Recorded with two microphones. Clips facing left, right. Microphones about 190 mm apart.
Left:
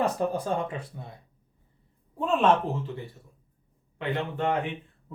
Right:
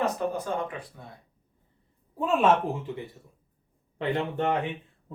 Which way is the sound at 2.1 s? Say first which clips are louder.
Even; 5° right (ahead or behind).